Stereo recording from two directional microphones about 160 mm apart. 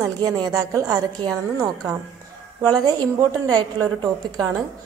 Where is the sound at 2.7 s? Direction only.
25° right (ahead or behind).